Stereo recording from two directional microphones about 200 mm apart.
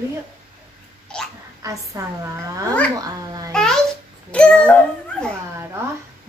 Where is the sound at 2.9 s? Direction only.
20° right (ahead or behind).